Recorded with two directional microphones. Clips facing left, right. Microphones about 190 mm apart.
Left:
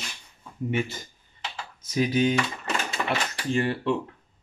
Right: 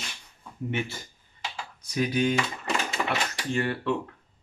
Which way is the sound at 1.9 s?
20° left (ahead or behind).